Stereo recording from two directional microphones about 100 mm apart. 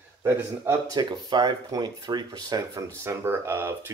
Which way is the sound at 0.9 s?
45° right (ahead or behind).